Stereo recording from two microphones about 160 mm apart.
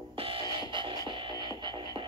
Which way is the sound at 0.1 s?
35° right (ahead or behind).